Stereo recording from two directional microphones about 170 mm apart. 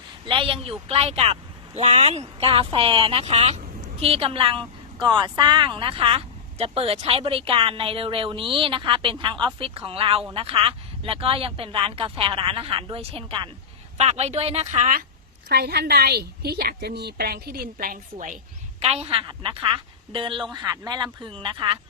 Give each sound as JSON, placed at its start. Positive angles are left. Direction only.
{"t": 0.3, "sound": "speech", "side_deg": -30}
{"t": 15.4, "sound": "a woman's voice", "side_deg": -65}
{"t": 18.8, "sound": "a woman's voice", "side_deg": -40}